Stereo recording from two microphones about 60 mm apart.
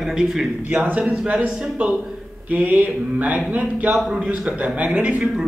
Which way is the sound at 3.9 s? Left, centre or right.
Centre.